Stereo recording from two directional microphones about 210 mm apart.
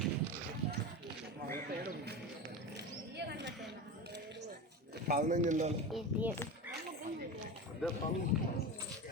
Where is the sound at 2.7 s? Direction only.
55° right (ahead or behind).